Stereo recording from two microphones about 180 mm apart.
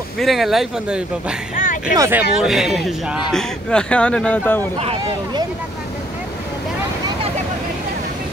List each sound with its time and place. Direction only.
0.2 s speech: centre (ahead or behind)
1.5 s a sound: 45° left (ahead or behind)
2.0 s speech: 10° right (ahead or behind)
2.4 s speech: centre (ahead or behind)
4.7 s speech: 35° right (ahead or behind)